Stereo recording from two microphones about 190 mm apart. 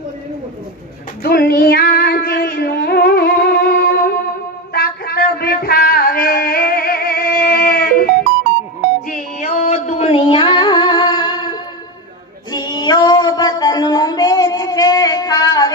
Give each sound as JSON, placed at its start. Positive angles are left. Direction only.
{"t": 1.2, "sound": "female singing", "side_deg": 55}
{"t": 4.7, "sound": "a sound", "side_deg": 55}
{"t": 9.0, "sound": "music", "side_deg": 40}
{"t": 12.5, "sound": "female singing", "side_deg": 20}